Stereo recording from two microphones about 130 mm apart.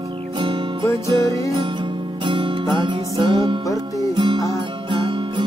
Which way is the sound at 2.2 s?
35° right (ahead or behind).